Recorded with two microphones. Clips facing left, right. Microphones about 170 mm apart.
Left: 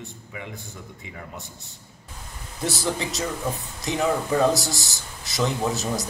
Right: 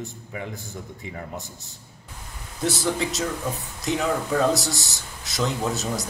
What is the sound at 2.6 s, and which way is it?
Speech, centre (ahead or behind).